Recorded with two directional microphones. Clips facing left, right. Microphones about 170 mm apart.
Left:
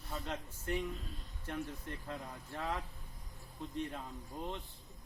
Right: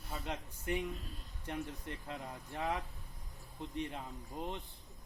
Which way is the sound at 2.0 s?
15° right (ahead or behind).